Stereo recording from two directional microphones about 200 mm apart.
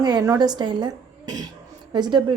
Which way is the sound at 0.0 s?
20° right (ahead or behind).